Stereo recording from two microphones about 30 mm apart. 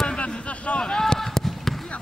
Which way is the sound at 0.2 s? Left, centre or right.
Left.